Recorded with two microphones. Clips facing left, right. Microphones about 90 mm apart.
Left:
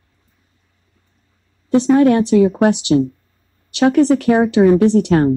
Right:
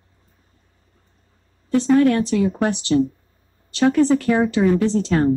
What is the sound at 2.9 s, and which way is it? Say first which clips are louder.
Speech: even; 45° left (ahead or behind).